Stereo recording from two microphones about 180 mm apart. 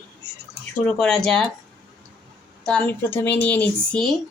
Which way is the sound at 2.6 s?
10° left (ahead or behind).